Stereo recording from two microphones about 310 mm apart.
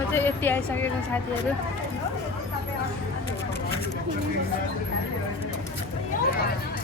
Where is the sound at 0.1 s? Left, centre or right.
Centre.